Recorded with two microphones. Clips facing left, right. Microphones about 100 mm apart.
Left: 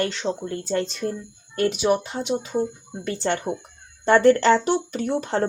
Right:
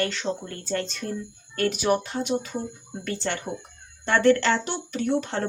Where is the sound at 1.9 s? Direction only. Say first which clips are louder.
Left 1 dB; 20° left (ahead or behind).